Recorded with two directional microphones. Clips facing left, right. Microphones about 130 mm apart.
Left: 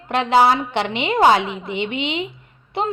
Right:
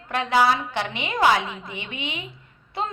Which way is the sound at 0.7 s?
65° left (ahead or behind).